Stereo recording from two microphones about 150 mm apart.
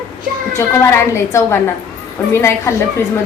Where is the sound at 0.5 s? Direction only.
20° left (ahead or behind).